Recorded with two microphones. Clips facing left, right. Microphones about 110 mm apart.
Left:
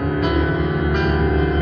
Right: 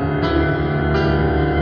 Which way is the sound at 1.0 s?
5° right (ahead or behind).